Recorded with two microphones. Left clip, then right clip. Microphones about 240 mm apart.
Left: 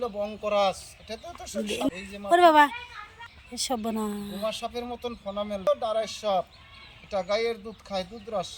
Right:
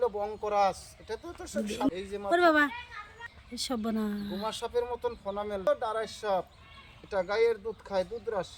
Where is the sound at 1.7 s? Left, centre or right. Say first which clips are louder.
Left 2 dB; centre.